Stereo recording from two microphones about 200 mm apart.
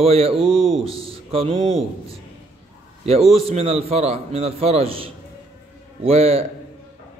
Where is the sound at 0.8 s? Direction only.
30° right (ahead or behind).